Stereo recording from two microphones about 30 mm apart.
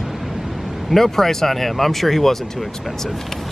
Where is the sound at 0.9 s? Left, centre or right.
Centre.